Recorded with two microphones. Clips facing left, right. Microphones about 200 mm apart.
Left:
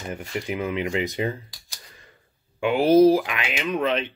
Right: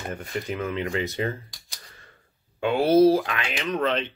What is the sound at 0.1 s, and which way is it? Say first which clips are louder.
Speech: left 3 dB; 15° left (ahead or behind).